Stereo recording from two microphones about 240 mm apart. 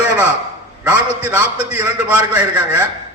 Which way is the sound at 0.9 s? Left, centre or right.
Centre.